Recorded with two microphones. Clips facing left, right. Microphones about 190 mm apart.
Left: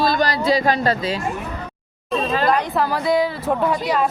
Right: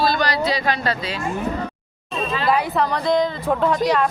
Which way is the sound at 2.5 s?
5° right (ahead or behind).